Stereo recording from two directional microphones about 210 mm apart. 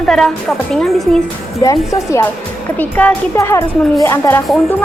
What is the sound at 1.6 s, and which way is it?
Speech, 15° left (ahead or behind).